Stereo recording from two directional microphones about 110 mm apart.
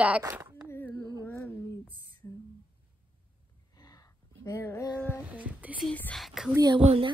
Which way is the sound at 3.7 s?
35° left (ahead or behind).